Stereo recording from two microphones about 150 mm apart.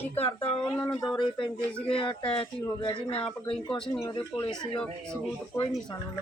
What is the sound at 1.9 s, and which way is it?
Speech, 35° left (ahead or behind).